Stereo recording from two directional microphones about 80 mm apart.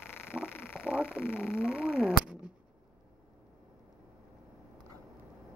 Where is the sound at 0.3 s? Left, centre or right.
Centre.